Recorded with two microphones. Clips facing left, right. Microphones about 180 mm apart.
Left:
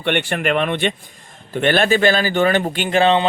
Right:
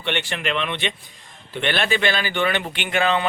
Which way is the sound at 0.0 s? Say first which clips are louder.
Left 6 dB; 55° left (ahead or behind).